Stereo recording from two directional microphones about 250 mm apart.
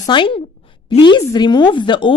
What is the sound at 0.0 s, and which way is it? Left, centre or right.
A woman's voice, centre.